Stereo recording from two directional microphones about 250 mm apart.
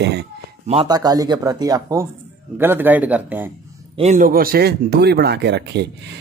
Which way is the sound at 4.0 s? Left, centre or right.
Right.